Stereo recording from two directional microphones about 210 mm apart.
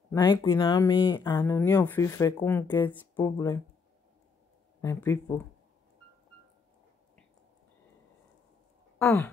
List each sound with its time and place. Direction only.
0.1 s speech: 15° left (ahead or behind)
4.8 s speech: 15° left (ahead or behind)
8.9 s sigh: 10° left (ahead or behind)